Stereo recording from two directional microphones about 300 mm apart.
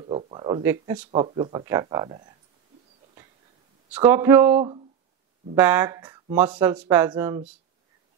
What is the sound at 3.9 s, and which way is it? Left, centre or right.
A man's voice, centre.